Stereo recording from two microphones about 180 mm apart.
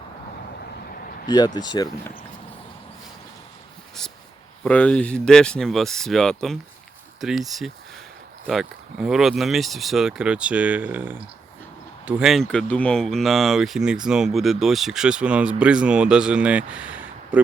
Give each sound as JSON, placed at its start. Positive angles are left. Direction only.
{"t": 1.5, "sound": "speech", "side_deg": 25}
{"t": 4.6, "sound": "speech", "side_deg": 5}